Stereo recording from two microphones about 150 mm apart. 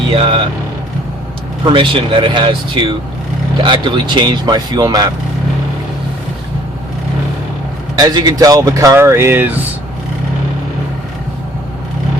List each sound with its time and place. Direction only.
0.1 s speech: 35° right (ahead or behind)
1.7 s speech: 35° right (ahead or behind)
7.9 s speech: 25° right (ahead or behind)